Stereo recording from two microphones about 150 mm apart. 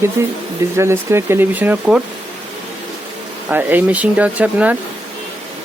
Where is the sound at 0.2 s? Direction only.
20° right (ahead or behind).